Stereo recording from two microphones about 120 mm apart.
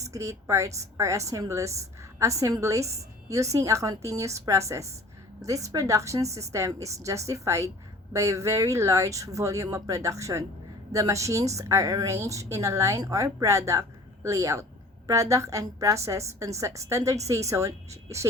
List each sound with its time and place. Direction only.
0.0 s a woman's voice: 25° right (ahead or behind)